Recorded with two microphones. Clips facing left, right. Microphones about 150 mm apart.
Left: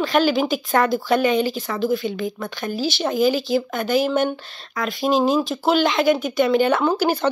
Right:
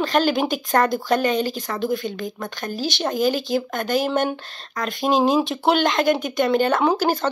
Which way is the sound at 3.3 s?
50° right (ahead or behind).